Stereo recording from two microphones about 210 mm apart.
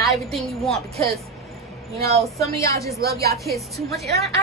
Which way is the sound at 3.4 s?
Centre (ahead or behind).